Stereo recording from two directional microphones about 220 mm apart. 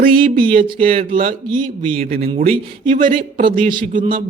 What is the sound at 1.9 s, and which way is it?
Speech, 45° right (ahead or behind).